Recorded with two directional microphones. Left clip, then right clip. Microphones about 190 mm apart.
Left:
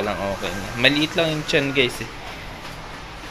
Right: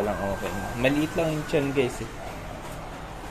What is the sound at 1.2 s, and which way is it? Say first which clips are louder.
Speech: left 5 dB; 10° left (ahead or behind).